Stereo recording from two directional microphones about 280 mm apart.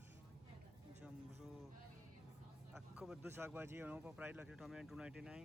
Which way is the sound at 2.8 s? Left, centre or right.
Centre.